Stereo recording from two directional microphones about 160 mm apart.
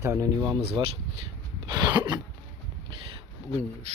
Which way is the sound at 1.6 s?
25° right (ahead or behind).